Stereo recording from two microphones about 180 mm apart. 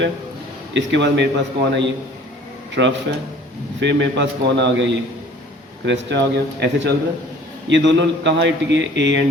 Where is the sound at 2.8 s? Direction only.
65° right (ahead or behind).